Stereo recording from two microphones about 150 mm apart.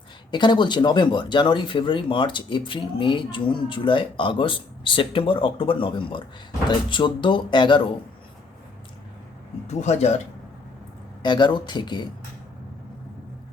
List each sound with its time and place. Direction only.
0.3 s speech: 30° left (ahead or behind)
9.6 s speech: 50° left (ahead or behind)
11.2 s speech: 30° left (ahead or behind)